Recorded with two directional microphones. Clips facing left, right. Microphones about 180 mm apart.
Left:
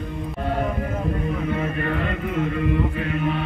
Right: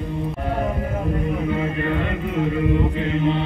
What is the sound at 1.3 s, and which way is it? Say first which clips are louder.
Chant: right 2 dB; 20° right (ahead or behind).